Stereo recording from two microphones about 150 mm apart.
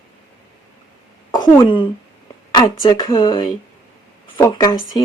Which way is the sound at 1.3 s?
30° left (ahead or behind).